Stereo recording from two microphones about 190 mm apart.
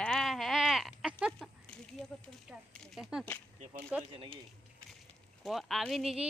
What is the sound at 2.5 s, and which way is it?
Speech, centre (ahead or behind).